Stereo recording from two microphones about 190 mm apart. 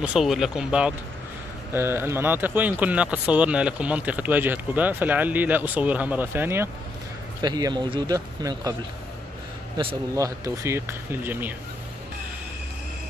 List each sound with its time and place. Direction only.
0.0 s speech: centre (ahead or behind); by 8.7 s 20° right (ahead or behind)
10.1 s speech: 15° right (ahead or behind)